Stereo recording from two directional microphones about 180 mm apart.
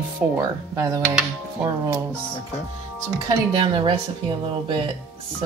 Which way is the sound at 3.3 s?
25° right (ahead or behind).